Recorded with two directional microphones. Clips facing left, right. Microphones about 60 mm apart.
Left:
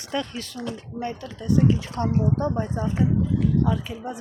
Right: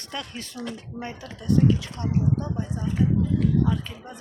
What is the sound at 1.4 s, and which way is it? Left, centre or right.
Speech, centre.